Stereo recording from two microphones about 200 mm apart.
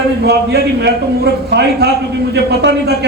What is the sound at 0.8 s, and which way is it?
A man's voice, 55° right (ahead or behind).